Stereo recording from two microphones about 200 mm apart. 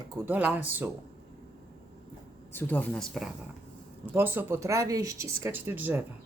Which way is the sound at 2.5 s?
10° left (ahead or behind).